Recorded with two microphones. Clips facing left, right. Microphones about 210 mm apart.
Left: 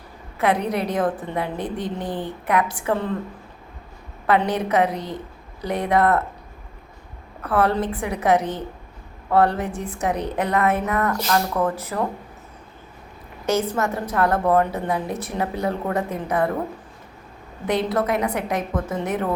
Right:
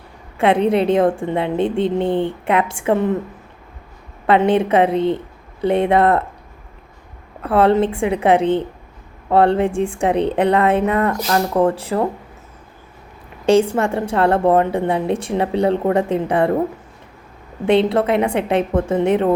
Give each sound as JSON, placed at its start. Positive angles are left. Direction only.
{"t": 0.3, "sound": "a woman's voice", "side_deg": -25}
{"t": 4.3, "sound": "a woman's voice", "side_deg": -25}
{"t": 7.4, "sound": "a woman's voice", "side_deg": -25}
{"t": 13.4, "sound": "a woman's voice", "side_deg": -30}
{"t": 17.7, "sound": "a woman's voice", "side_deg": -25}